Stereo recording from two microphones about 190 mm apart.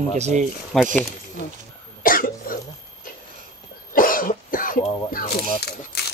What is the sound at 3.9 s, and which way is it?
Cough, 45° left (ahead or behind).